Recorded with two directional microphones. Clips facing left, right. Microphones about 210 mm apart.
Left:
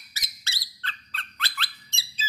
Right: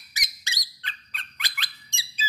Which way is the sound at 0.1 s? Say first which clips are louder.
Right 3 dB; 15° right (ahead or behind).